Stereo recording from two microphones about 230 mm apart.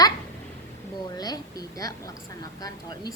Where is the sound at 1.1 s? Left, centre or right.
Centre.